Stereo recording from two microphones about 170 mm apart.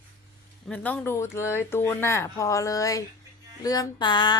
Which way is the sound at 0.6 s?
10° left (ahead or behind).